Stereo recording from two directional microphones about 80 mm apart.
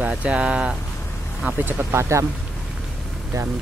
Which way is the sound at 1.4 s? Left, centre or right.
Right.